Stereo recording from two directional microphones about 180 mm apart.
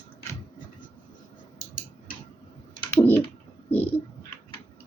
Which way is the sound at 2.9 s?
10° left (ahead or behind).